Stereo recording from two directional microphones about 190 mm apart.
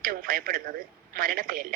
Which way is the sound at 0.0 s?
50° right (ahead or behind).